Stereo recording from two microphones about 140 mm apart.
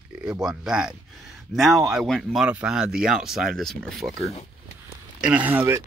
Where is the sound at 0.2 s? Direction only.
5° right (ahead or behind).